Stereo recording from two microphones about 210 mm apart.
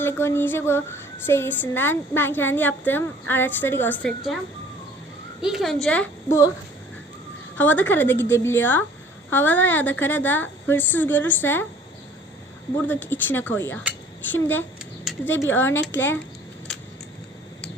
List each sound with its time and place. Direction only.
0.0 s speech: 10° left (ahead or behind)
5.4 s a woman's voice: centre (ahead or behind)
7.5 s speech: 10° left (ahead or behind)
12.7 s speech: 10° left (ahead or behind)